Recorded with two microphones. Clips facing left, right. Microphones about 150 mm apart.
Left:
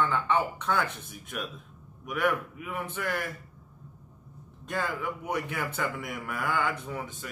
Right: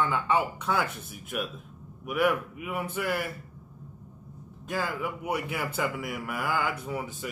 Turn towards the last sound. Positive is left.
turn(degrees=-10)  # may be behind; listen again after turning